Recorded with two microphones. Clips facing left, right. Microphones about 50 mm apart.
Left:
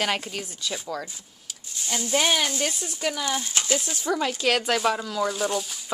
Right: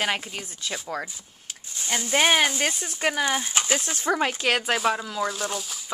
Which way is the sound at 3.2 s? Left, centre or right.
Right.